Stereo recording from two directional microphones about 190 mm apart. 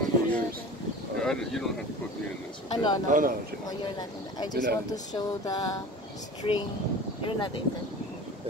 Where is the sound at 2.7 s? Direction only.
25° left (ahead or behind).